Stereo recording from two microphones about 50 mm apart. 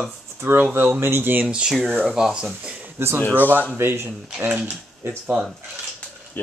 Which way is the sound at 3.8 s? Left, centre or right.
Right.